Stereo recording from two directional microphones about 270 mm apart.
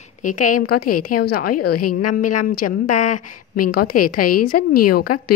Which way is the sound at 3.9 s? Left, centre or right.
Left.